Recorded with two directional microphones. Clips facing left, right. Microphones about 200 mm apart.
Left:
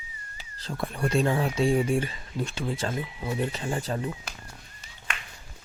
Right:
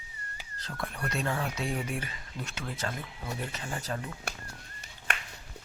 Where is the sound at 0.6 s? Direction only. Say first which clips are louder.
Left 7 dB; 30° left (ahead or behind).